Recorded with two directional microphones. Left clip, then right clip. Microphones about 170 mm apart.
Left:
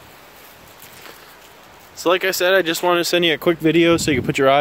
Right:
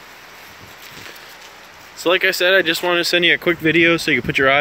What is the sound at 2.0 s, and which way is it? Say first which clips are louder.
Speech: right 2 dB; 10° left (ahead or behind).